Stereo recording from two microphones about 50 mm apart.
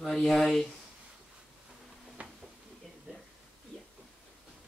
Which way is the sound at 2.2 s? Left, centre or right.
Right.